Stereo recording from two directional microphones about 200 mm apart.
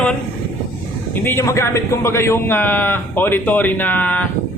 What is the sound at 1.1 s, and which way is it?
A man's voice, 10° left (ahead or behind).